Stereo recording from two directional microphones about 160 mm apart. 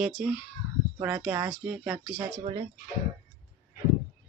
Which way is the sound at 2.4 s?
30° right (ahead or behind).